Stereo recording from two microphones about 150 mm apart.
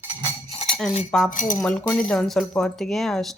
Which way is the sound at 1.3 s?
60° left (ahead or behind).